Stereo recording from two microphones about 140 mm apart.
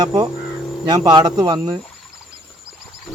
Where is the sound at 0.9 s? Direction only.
30° right (ahead or behind).